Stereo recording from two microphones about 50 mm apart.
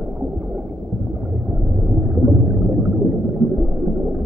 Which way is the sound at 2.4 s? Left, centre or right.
Centre.